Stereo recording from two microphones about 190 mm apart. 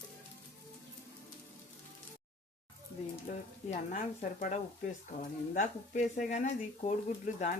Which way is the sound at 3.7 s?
40° left (ahead or behind).